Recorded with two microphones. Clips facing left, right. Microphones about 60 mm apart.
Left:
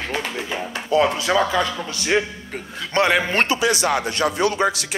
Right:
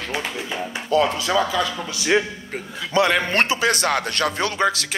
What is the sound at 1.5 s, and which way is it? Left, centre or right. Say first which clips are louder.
Speech: left 2 dB; left.